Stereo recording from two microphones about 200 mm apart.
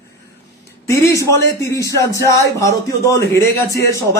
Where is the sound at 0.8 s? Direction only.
15° left (ahead or behind).